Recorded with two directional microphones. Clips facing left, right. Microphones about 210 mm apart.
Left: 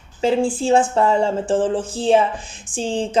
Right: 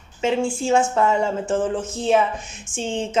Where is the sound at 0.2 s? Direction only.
35° left (ahead or behind).